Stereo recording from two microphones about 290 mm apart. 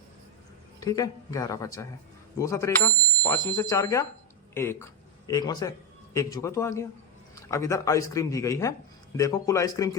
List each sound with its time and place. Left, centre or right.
0.8 s speech: centre
2.4 s bicycle bell: centre
3.5 s speech: centre